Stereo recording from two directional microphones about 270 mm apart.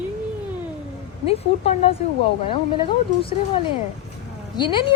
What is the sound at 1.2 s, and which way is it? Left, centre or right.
Speech, left.